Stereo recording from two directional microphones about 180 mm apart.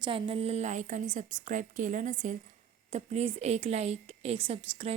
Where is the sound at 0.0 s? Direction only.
30° right (ahead or behind).